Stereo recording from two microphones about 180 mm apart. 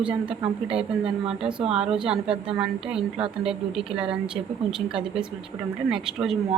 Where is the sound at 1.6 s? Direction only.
35° right (ahead or behind).